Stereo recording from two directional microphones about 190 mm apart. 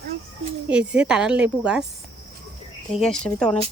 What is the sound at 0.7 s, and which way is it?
A woman's voice, 5° right (ahead or behind).